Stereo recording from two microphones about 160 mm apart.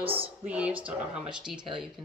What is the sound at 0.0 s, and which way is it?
Speech, 35° right (ahead or behind).